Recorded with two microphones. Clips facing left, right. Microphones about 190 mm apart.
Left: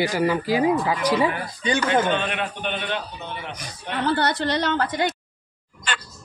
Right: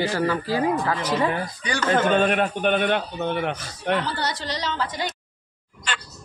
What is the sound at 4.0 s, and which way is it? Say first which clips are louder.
A woman's voice: left 6 dB; 60° left (ahead or behind).